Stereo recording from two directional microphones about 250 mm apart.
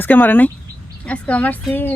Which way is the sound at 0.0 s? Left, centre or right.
Centre.